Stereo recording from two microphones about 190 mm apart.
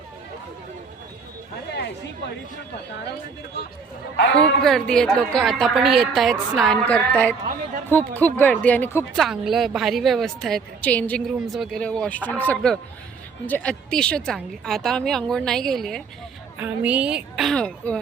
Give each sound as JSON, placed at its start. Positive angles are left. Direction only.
{"t": 4.4, "sound": "a woman's voice", "side_deg": 5}
{"t": 9.1, "sound": "a woman's voice", "side_deg": 0}